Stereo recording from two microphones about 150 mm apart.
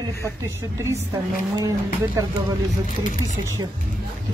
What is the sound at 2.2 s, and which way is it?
Speech, 20° right (ahead or behind).